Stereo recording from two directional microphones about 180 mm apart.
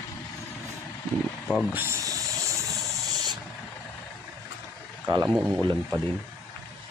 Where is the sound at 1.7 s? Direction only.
15° right (ahead or behind).